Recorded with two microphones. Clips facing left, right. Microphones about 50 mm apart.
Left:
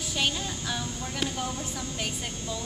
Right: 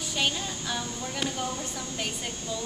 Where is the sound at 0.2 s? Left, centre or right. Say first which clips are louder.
Even; centre.